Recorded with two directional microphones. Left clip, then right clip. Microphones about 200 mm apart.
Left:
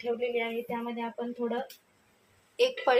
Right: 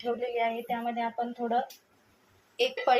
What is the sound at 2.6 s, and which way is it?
Speech, centre (ahead or behind).